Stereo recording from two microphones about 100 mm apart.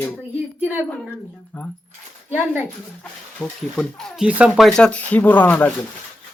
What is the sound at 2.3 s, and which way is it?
Speech, 20° right (ahead or behind).